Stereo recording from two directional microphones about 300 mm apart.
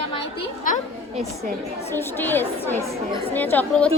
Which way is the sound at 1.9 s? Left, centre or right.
Centre.